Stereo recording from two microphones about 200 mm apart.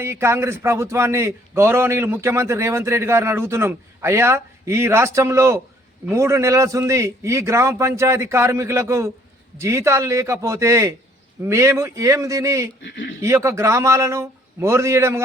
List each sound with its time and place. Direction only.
0.0 s a man's voice: 15° right (ahead or behind)
12.8 s speech: 60° left (ahead or behind)
13.2 s a man's voice: 15° right (ahead or behind)